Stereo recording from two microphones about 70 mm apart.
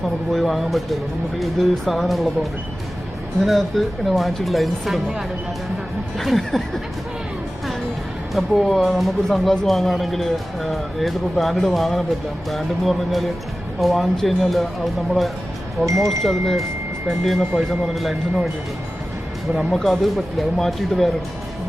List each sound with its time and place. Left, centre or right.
0.3 s speech: centre
3.3 s speech: centre
6.1 s speech: centre
8.4 s speech: centre
15.8 s speech: right
16.2 s speech: centre
19.5 s speech: centre